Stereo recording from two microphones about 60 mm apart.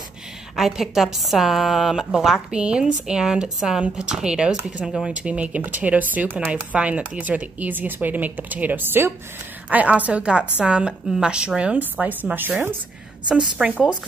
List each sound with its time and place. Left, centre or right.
0.6 s a woman's voice: centre
2.5 s speech: centre
5.1 s speech: centre
11.8 s a woman's voice: right
13.3 s speech: centre
13.7 s speech: right